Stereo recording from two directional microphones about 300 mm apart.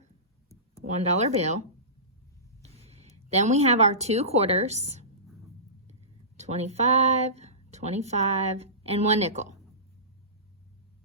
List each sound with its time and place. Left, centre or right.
0.9 s speech: right
2.7 s a woman's voice: centre